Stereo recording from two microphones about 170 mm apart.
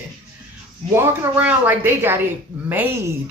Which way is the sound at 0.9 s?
10° right (ahead or behind).